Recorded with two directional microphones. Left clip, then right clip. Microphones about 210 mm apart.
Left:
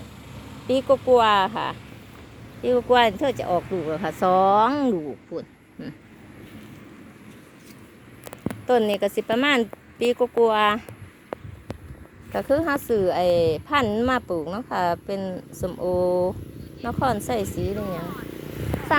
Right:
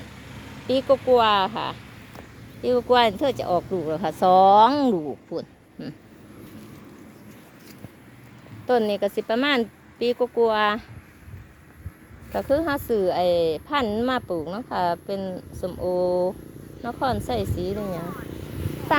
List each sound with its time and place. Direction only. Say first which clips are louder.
0.7 s speech: left 1 dB; centre (ahead or behind)
8.6 s speech: left 1 dB; 5° left (ahead or behind)
12.3 s speech: left 1 dB; 10° left (ahead or behind)
18.1 s vehicle: left 1 dB; 50° left (ahead or behind)